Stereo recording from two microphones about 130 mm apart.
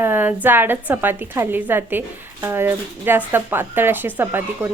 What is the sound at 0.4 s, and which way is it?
A woman's voice, 15° right (ahead or behind).